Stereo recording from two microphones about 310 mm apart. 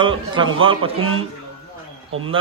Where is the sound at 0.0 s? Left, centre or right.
Centre.